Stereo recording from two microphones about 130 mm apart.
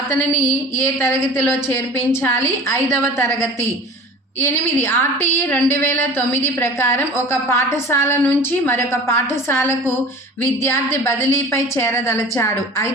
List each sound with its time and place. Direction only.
0.8 s a woman's voice: 20° left (ahead or behind)